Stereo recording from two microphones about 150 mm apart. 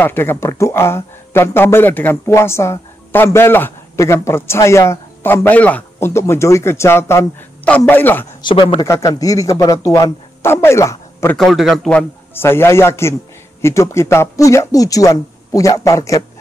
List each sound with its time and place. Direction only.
0.0 s speech: 15° left (ahead or behind)
8.4 s speech: 35° left (ahead or behind)
8.8 s speech: 20° left (ahead or behind)
11.3 s speech: centre (ahead or behind); by 16.3 s 20° left (ahead or behind)